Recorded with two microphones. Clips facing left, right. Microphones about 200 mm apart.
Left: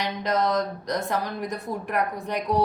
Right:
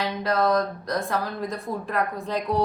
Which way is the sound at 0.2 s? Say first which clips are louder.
Right 2 dB; 20° left (ahead or behind).